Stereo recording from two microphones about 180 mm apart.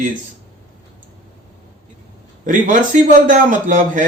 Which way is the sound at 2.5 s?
45° right (ahead or behind).